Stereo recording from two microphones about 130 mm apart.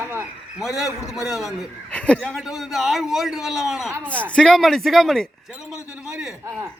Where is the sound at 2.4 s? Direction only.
5° right (ahead or behind).